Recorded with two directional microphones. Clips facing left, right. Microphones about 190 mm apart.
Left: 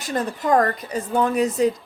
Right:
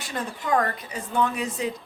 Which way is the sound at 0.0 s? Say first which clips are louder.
Left 7 dB; 40° left (ahead or behind).